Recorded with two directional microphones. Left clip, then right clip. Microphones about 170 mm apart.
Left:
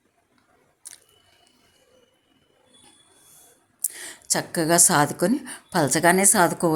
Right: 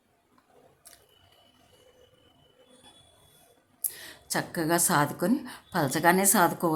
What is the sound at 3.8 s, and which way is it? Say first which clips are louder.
A woman's voice: left 6 dB; 20° left (ahead or behind).